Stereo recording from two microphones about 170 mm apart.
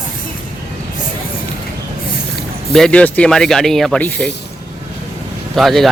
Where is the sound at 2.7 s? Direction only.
5° left (ahead or behind).